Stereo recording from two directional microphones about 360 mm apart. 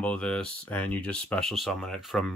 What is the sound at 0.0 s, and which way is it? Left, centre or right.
Speech, centre.